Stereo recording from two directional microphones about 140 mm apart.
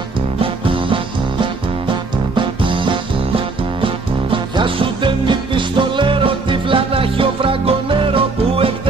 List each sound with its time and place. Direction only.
0.4 s music: 40° right (ahead or behind)